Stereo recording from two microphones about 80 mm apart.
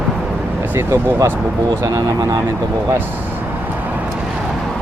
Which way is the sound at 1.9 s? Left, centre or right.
Right.